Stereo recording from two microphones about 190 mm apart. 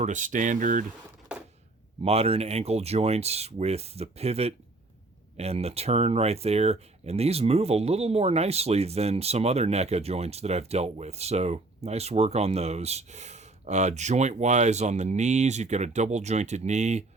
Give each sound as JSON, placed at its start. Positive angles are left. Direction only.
{"t": 0.0, "sound": "speech", "side_deg": -40}
{"t": 1.3, "sound": "a sound", "side_deg": -5}
{"t": 2.0, "sound": "speech", "side_deg": -30}